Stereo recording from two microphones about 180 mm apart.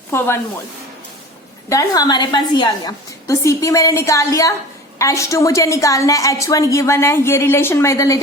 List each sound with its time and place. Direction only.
0.1 s a woman's voice: 15° left (ahead or behind)
1.7 s a woman's voice: 20° left (ahead or behind)